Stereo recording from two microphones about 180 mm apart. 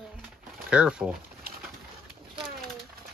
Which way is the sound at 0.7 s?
5° right (ahead or behind).